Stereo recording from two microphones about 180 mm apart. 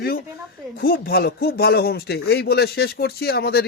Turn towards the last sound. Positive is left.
turn(degrees=60)  # may be behind; listen again after turning